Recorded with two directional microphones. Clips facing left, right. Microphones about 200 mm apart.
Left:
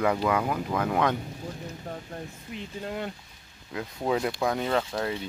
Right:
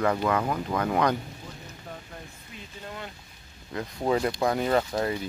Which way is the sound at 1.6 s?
40° left (ahead or behind).